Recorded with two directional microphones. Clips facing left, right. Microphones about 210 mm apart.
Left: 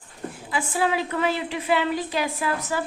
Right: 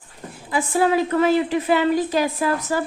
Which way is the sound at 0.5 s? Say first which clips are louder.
Right 6 dB; 45° right (ahead or behind).